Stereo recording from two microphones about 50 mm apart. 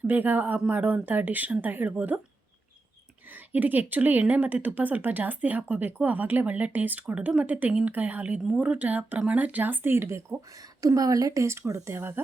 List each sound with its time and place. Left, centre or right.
0.1 s speech: right
3.3 s speech: right
11.9 s speech: right